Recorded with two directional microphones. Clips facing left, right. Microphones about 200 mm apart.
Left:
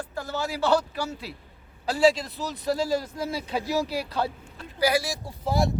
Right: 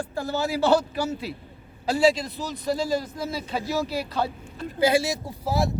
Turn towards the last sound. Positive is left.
turn(degrees=0)  # may be behind; listen again after turning